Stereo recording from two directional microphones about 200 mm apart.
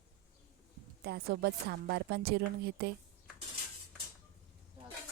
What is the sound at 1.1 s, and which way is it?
A woman's voice, 55° right (ahead or behind).